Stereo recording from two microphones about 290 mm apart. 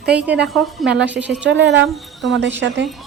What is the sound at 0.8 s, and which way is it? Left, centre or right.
Speech, centre.